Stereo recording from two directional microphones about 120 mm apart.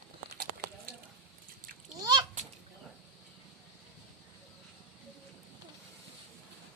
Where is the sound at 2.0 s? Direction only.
35° right (ahead or behind).